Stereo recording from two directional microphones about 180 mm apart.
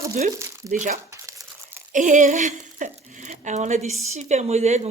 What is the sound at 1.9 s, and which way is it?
A woman's voice, 45° right (ahead or behind).